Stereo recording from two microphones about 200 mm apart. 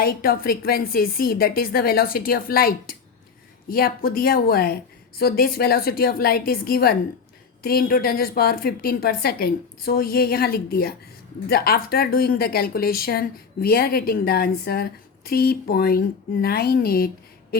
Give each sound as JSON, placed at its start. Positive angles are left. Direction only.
{"t": 0.0, "sound": "speech", "side_deg": 50}